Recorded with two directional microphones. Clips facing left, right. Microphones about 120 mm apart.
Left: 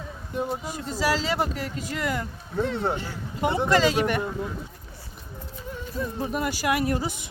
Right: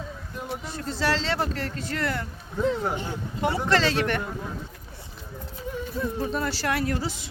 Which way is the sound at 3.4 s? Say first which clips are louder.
Left 2 dB; 20° left (ahead or behind).